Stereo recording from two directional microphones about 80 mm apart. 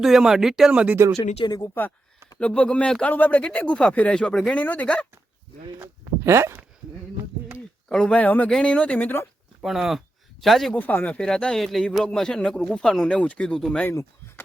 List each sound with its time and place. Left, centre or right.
0.0 s speech: centre
1.2 s speech: left
2.4 s speech: centre
5.8 s speech: right
7.9 s speech: centre
9.6 s speech: centre
10.7 s speech: left